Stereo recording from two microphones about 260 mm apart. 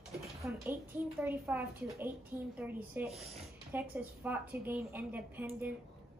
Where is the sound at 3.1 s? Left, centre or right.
Right.